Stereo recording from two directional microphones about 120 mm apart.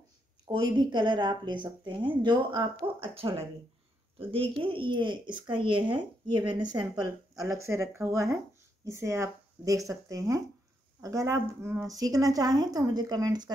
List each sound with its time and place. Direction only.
0.5 s speech: 40° right (ahead or behind)